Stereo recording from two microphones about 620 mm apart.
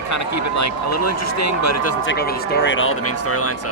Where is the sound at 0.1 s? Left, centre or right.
Left.